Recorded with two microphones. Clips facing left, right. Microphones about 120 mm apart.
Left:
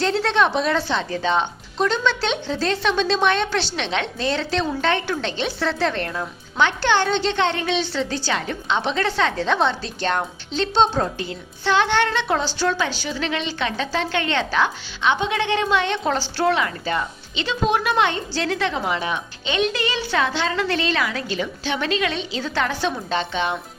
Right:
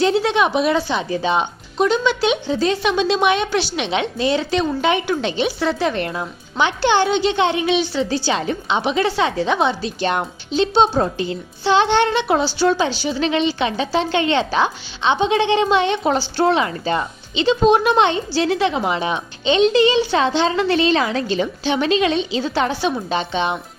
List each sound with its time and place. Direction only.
0.0 s a woman's voice: 10° right (ahead or behind)